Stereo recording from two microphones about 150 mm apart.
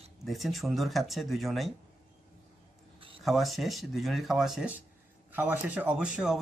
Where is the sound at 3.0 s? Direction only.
35° right (ahead or behind).